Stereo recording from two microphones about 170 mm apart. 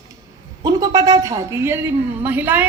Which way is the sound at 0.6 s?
20° right (ahead or behind).